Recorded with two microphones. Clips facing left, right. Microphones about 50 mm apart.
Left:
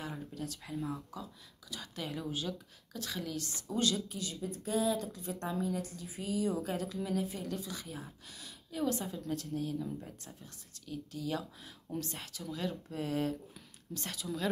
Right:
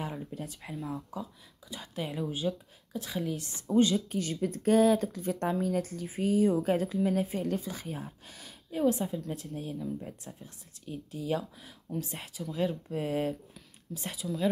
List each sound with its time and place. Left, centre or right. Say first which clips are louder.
0.3 s speech: right 2 dB; right
0.7 s speech: right 1 dB; centre
1.7 s speech: right 4 dB; right
4.1 s speech: right 8 dB; right
8.8 s speech: right 7 dB; centre
9.5 s speech: even; right
13.9 s speech: right 2 dB; centre